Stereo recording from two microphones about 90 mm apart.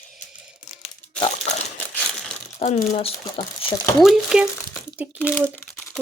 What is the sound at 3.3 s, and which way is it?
Speech, 90° left.